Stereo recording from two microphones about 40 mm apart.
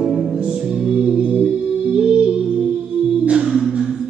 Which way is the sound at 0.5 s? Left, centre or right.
Centre.